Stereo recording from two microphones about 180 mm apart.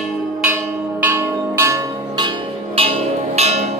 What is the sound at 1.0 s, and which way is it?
Bell, 15° right (ahead or behind).